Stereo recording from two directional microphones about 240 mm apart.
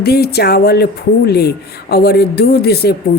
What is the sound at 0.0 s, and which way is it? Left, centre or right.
Speech, left.